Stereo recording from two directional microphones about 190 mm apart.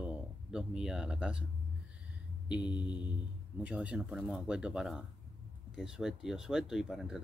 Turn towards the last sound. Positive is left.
turn(degrees=-5)  # may be behind; listen again after turning